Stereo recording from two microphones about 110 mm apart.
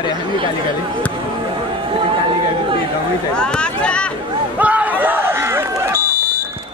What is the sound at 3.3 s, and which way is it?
Speech, 10° left (ahead or behind).